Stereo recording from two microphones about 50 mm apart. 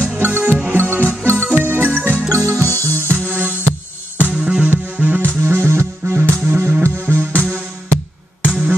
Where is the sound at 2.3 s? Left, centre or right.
Right.